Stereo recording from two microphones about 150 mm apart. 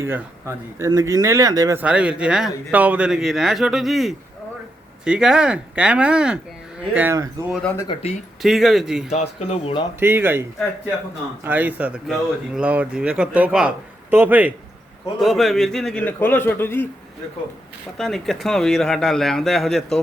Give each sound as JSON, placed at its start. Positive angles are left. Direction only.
{"t": 0.0, "sound": "speech", "side_deg": -15}
{"t": 1.8, "sound": "a man's voice", "side_deg": -5}
{"t": 7.5, "sound": "a man's voice", "side_deg": 10}
{"t": 8.0, "sound": "speech", "side_deg": 45}
{"t": 8.4, "sound": "speech", "side_deg": 0}
{"t": 9.0, "sound": "speech", "side_deg": 45}
{"t": 10.0, "sound": "a man's voice", "side_deg": -15}
{"t": 11.4, "sound": "a man's voice", "side_deg": -10}
{"t": 15.2, "sound": "a man's voice", "side_deg": 0}
{"t": 17.9, "sound": "speech", "side_deg": 0}